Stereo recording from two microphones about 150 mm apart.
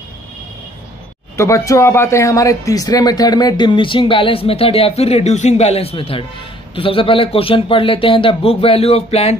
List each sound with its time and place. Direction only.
1.3 s speech: 20° left (ahead or behind); by 9.4 s 45° left (ahead or behind)